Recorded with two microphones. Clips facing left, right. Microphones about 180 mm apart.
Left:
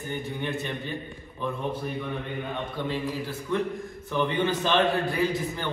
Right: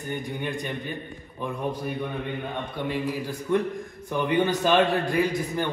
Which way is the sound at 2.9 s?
15° right (ahead or behind).